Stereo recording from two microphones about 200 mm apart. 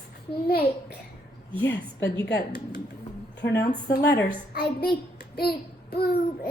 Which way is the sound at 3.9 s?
55° left (ahead or behind).